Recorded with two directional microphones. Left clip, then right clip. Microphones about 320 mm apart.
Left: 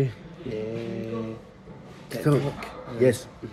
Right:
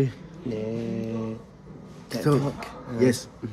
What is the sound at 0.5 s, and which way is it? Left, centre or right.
Music, centre.